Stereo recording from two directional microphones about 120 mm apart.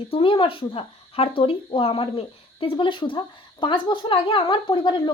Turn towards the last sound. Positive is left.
turn(degrees=40)  # may be behind; listen again after turning